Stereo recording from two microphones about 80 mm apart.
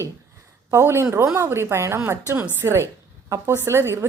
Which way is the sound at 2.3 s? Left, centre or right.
Right.